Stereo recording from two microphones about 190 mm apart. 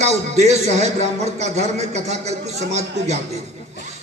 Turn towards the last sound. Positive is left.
turn(degrees=-35)  # may be behind; listen again after turning